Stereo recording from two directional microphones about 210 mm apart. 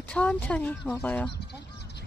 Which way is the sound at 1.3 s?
50° left (ahead or behind).